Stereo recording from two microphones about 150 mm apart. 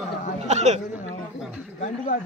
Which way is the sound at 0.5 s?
50° right (ahead or behind).